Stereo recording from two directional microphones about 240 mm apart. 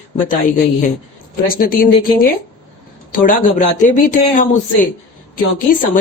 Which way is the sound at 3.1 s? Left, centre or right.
Left.